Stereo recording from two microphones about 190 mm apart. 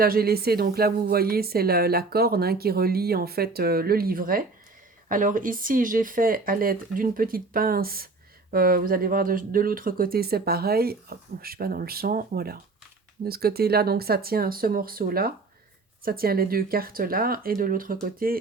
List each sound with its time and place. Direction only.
0.0 s a woman's voice: 50° right (ahead or behind)